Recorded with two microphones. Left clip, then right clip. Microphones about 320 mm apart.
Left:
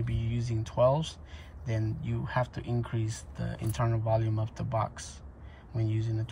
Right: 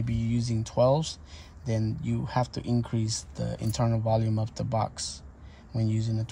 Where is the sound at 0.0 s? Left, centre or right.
Centre.